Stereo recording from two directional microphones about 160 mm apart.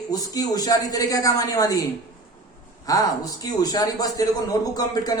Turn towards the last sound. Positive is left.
turn(degrees=25)  # may be behind; listen again after turning